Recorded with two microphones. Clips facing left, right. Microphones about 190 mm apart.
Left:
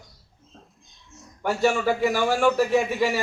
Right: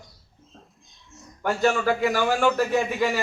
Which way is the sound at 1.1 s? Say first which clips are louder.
Even; centre (ahead or behind).